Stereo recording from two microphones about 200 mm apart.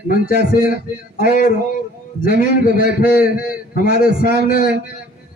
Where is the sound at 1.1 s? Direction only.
45° left (ahead or behind).